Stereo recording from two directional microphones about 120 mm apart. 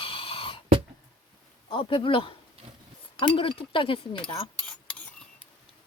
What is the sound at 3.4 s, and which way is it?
Speech, 45° left (ahead or behind).